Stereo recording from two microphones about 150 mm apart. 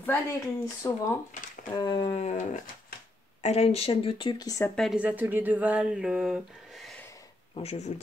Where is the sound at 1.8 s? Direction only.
30° left (ahead or behind); by 2.7 s 55° left (ahead or behind).